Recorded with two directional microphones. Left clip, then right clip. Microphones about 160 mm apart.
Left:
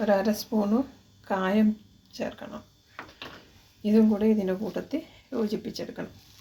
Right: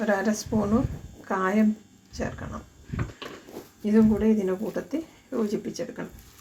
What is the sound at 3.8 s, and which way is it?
Speech, 20° left (ahead or behind).